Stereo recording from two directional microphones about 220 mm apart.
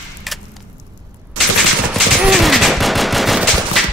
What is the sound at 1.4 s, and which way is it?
Gunshot, 90° right.